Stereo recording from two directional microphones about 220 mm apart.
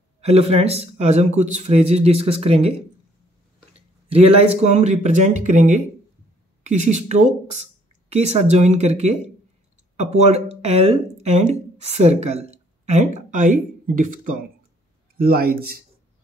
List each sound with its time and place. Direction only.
0.2 s speech: 30° right (ahead or behind)
4.1 s speech: 25° right (ahead or behind); by 15.8 s 45° right (ahead or behind)